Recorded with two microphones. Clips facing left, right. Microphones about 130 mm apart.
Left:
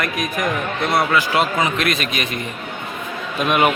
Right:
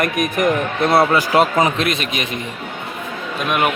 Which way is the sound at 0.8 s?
30° right (ahead or behind).